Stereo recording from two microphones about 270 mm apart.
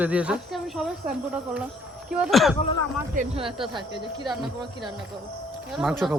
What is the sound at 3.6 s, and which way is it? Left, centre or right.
Speech, centre.